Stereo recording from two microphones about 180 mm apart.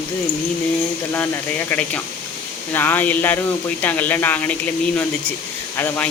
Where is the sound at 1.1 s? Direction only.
10° left (ahead or behind).